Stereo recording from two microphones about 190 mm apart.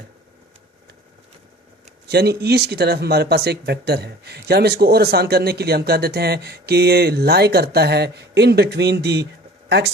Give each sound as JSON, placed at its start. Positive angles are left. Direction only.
{"t": 2.0, "sound": "speech", "side_deg": -55}